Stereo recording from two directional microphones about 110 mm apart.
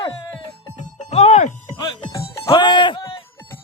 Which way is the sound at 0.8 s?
80° left.